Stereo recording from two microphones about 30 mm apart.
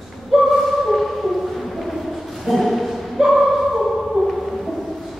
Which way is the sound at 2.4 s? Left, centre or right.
Centre.